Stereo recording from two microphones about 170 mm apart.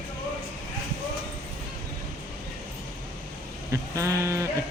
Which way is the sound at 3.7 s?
20° right (ahead or behind).